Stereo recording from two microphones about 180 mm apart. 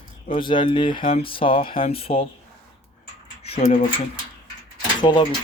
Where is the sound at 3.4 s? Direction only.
35° left (ahead or behind).